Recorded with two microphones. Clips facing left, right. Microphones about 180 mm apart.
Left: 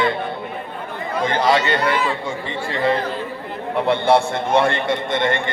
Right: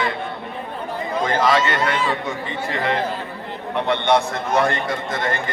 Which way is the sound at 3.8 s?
30° left (ahead or behind).